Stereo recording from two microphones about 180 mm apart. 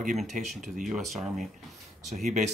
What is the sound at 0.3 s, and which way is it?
Speech, 45° right (ahead or behind).